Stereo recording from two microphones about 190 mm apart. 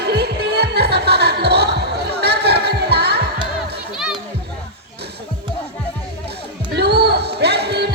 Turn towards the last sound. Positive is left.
turn(degrees=-60)  # may be behind; listen again after turning